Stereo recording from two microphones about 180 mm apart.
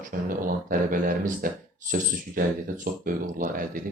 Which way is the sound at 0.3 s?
50° right (ahead or behind).